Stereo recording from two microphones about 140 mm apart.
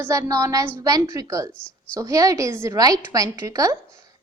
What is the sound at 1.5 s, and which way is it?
Speech, 5° left (ahead or behind).